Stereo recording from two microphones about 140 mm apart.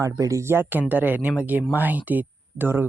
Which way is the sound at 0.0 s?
20° right (ahead or behind).